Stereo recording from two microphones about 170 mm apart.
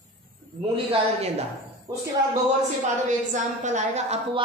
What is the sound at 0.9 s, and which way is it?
Speech, 35° right (ahead or behind).